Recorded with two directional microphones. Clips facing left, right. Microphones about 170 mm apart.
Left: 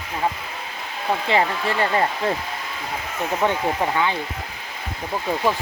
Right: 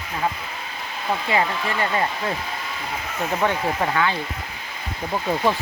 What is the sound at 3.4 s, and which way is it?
Speech, 10° left (ahead or behind).